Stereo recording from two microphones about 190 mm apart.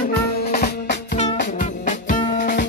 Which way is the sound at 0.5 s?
55° left (ahead or behind).